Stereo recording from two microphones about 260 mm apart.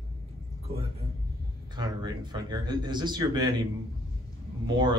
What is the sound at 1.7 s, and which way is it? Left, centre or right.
Speech, centre.